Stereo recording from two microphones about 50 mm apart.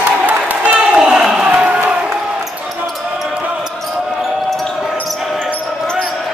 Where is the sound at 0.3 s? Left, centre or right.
Right.